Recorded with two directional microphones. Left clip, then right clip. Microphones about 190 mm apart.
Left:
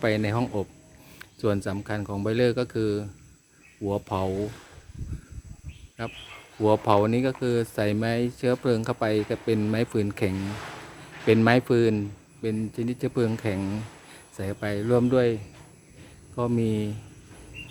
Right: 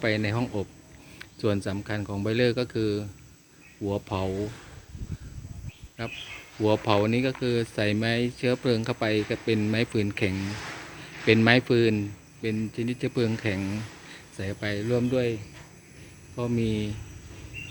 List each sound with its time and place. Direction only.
0.0 s speech: 10° left (ahead or behind)
6.6 s speech: 10° left (ahead or behind)
14.9 s speech: 25° left (ahead or behind)
16.3 s speech: 10° left (ahead or behind)